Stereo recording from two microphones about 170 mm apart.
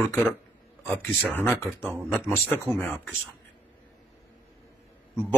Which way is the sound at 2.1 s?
15° left (ahead or behind).